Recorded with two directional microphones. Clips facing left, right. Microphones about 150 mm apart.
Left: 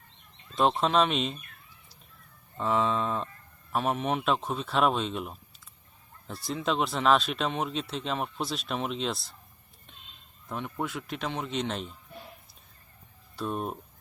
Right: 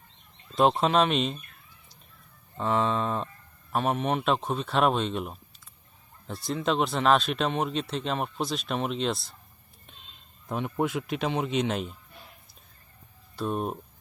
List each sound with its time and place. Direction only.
0.8 s speech: centre (ahead or behind)
2.6 s speech: centre (ahead or behind)
10.5 s speech: 20° right (ahead or behind)
13.3 s speech: centre (ahead or behind)